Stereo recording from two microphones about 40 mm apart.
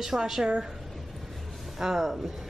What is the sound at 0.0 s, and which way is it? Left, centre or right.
Speech, centre.